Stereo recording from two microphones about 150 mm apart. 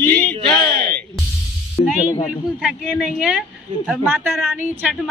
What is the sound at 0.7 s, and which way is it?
Speech, 90° right.